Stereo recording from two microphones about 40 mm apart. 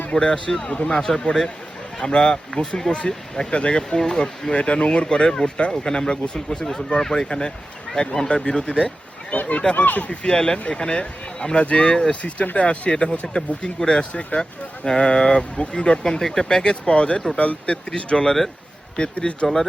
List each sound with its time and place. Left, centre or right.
0.1 s speech: left
9.3 s a sound: left
9.7 s speech: left
10.1 s speech: left
14.1 s speech: left
14.8 s speech: left